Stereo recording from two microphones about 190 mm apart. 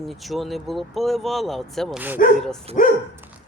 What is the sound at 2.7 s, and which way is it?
Speech, 30° right (ahead or behind).